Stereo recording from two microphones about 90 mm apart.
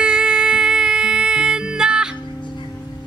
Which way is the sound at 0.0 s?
10° right (ahead or behind).